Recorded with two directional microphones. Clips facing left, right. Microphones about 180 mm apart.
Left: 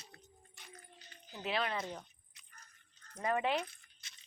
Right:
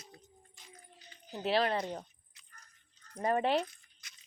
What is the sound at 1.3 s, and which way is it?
Speech, 35° right (ahead or behind).